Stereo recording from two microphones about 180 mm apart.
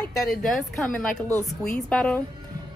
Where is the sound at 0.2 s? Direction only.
Centre (ahead or behind).